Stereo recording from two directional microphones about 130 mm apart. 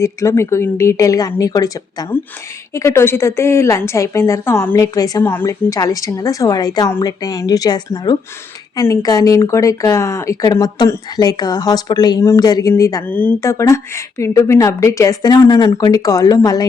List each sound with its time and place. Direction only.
0.0 s speech: 20° left (ahead or behind)
5.2 s speech: 20° left (ahead or behind)
13.1 s speech: 15° left (ahead or behind)